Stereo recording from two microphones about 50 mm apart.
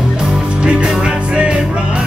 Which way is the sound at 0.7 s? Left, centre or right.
Right.